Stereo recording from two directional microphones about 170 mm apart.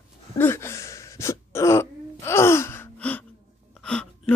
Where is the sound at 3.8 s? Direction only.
5° left (ahead or behind).